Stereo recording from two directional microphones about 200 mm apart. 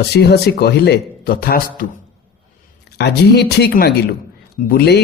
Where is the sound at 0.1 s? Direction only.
55° left (ahead or behind).